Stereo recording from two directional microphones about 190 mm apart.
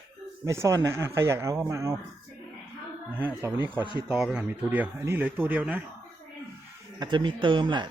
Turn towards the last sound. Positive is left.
turn(degrees=-25)  # may be behind; listen again after turning